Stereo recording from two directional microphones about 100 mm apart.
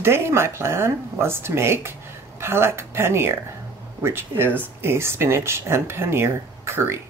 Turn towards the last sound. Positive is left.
turn(degrees=-25)  # may be behind; listen again after turning